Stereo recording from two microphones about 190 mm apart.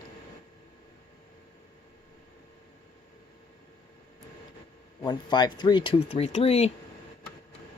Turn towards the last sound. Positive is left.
turn(degrees=30)  # may be behind; listen again after turning